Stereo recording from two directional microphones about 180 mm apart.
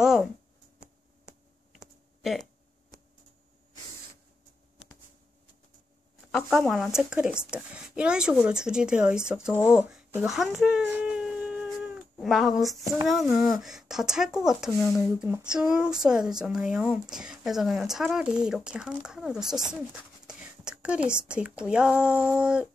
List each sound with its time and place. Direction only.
0.0 s a sound: 5° right (ahead or behind)
6.3 s speech: centre (ahead or behind)
9.6 s a sound: 5° right (ahead or behind)
12.8 s speech: 15° right (ahead or behind)
13.1 s speech: centre (ahead or behind)
15.1 s speech: 10° right (ahead or behind)